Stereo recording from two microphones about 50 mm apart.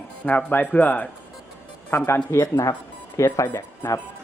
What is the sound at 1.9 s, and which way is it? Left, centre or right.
Speech, left.